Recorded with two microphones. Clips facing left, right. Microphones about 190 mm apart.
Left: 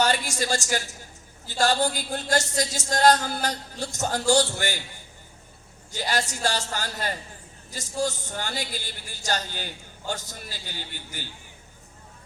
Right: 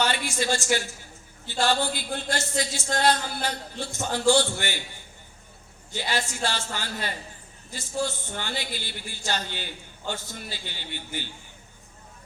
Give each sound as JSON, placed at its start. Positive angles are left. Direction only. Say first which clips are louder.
{"t": 0.0, "sound": "speech", "louder": "left 2 dB", "side_deg": 40}
{"t": 5.9, "sound": "speech", "louder": "left 2 dB", "side_deg": 40}